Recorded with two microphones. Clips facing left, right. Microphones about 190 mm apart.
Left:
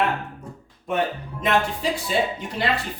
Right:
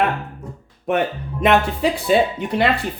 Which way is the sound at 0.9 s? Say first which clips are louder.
Right 4 dB; 70° right (ahead or behind).